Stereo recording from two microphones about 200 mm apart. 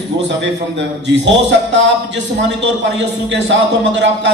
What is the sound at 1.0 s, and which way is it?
Speech, 60° right (ahead or behind).